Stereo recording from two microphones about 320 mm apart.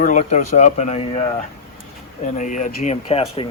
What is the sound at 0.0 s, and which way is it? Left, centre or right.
Speech, left.